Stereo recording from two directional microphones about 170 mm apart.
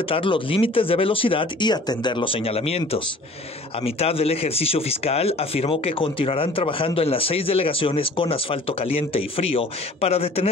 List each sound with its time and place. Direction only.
0.1 s speech: 30° left (ahead or behind)